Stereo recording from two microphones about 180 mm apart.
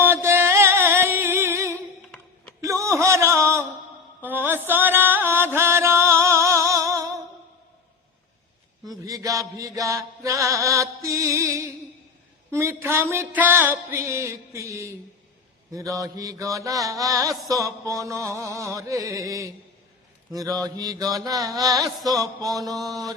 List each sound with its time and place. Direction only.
0.0 s music: 15° right (ahead or behind)
2.6 s a sound: 15° right (ahead or behind)
4.2 s music: 10° right (ahead or behind)
8.9 s music: 20° right (ahead or behind)
20.3 s mantra: 20° right (ahead or behind)